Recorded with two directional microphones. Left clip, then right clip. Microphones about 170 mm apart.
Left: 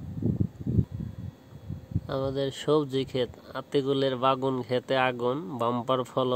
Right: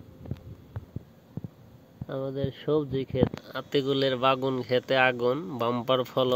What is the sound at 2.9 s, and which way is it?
Speech, 70° left (ahead or behind).